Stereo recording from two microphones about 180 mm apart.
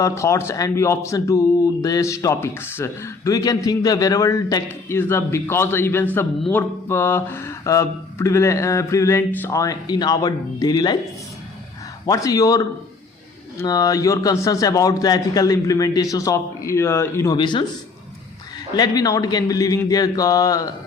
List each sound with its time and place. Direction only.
0.0 s speech: 15° left (ahead or behind)
12.0 s a man's voice: 20° left (ahead or behind)
17.3 s a man's voice: 25° left (ahead or behind)
18.7 s a man's voice: 20° left (ahead or behind)